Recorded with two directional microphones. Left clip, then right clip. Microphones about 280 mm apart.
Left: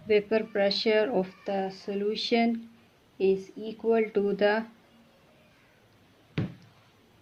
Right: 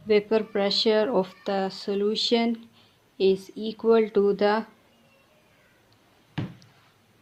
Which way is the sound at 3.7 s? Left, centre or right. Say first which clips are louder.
Right 5 dB; right.